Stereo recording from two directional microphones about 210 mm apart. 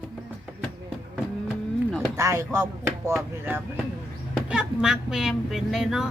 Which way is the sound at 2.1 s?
15° right (ahead or behind).